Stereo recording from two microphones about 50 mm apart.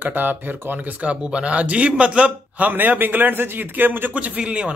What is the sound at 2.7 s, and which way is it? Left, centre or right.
Speech, right.